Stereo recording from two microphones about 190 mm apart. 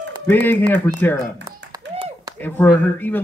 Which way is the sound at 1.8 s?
70° right (ahead or behind).